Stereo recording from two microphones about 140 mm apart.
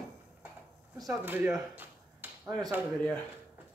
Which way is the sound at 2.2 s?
15° right (ahead or behind).